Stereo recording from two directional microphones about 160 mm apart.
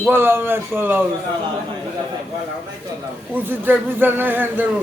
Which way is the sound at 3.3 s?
10° right (ahead or behind).